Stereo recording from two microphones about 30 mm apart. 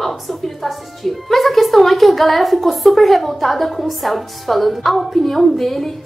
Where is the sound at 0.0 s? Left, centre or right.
Centre.